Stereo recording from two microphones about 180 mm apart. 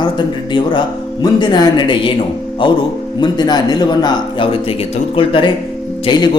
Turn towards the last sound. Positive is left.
turn(degrees=25)  # may be behind; listen again after turning